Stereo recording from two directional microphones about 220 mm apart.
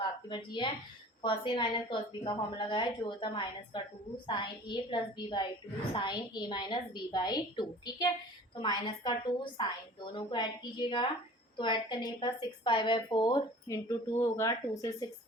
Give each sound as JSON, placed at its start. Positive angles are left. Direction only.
{"t": 0.3, "sound": "a woman's voice", "side_deg": 20}